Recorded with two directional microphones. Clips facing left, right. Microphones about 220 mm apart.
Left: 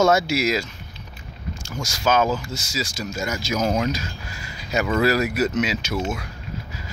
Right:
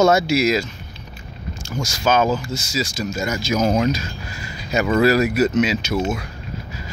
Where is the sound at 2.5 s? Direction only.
10° left (ahead or behind).